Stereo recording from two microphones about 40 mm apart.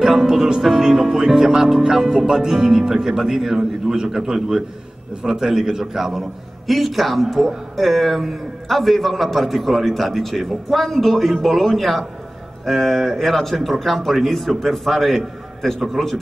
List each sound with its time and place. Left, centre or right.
0.0 s music: centre
0.6 s a man's voice: centre
1.2 s a man's voice: centre
2.5 s speech: right
2.9 s a man's voice: centre